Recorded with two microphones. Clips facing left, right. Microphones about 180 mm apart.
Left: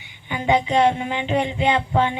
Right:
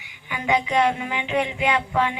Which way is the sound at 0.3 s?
30° left (ahead or behind).